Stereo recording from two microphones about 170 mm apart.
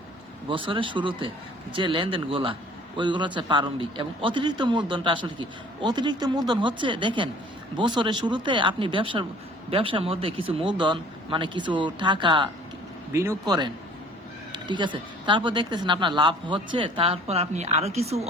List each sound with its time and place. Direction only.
0.4 s a man's voice: 30° right (ahead or behind)